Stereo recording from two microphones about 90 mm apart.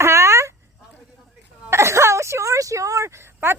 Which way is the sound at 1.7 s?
30° right (ahead or behind).